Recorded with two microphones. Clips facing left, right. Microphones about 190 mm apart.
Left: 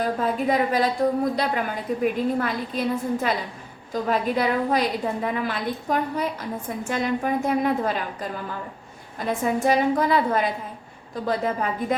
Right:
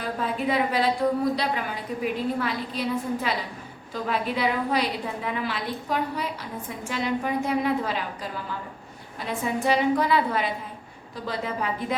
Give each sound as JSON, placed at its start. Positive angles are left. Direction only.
{"t": 0.2, "sound": "a woman's voice", "side_deg": 45}
{"t": 9.1, "sound": "a woman's voice", "side_deg": 45}